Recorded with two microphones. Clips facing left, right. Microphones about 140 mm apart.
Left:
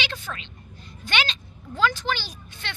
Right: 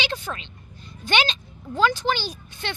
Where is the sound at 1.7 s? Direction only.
15° right (ahead or behind).